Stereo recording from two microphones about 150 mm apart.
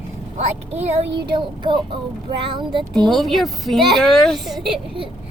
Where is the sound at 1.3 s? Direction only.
30° right (ahead or behind).